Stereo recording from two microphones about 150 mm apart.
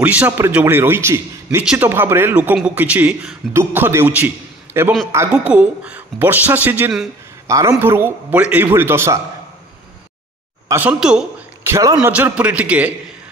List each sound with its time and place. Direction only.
0.0 s a woman's voice: 10° right (ahead or behind)
7.4 s a man's voice: 20° right (ahead or behind)
10.7 s a woman's voice: 10° right (ahead or behind)
11.6 s a man's voice: 20° right (ahead or behind)
12.1 s a woman's voice: 10° right (ahead or behind)